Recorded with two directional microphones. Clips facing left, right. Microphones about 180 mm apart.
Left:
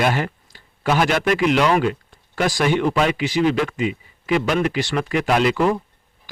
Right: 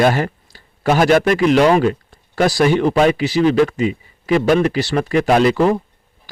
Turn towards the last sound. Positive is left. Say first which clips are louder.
# right 4 dB
turn(degrees=-35)  # may be behind; listen again after turning